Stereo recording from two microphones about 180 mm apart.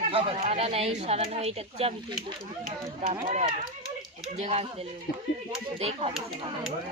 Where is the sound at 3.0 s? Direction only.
40° right (ahead or behind).